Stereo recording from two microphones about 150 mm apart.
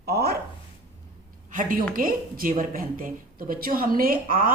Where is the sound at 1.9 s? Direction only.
70° right (ahead or behind).